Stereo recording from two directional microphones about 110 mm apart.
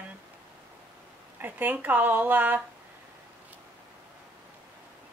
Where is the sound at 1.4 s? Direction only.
15° right (ahead or behind).